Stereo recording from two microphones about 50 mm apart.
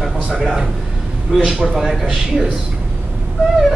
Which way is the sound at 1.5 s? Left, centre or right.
Centre.